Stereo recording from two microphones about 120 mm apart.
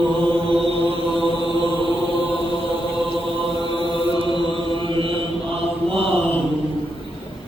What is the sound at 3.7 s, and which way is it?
Chant, 45° right (ahead or behind).